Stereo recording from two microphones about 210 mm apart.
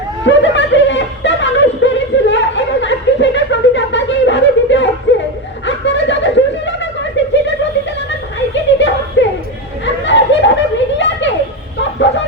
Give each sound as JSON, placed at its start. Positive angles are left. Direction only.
{"t": 0.3, "sound": "a sound", "side_deg": 60}
{"t": 5.1, "sound": "laughter", "side_deg": 60}
{"t": 5.6, "sound": "snicker", "side_deg": 60}
{"t": 8.5, "sound": "chuckle", "side_deg": 60}
{"t": 9.8, "sound": "snicker", "side_deg": 60}